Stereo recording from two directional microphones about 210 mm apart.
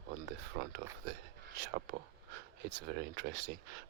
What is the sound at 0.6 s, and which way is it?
Speech, 60° right (ahead or behind).